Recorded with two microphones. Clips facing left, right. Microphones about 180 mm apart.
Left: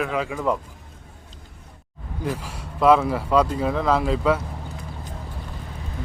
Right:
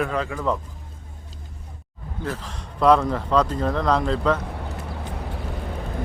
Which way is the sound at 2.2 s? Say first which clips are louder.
Left 2 dB; 10° left (ahead or behind).